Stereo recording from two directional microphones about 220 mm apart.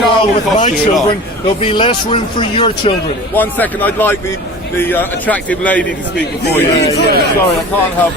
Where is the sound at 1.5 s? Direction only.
25° left (ahead or behind).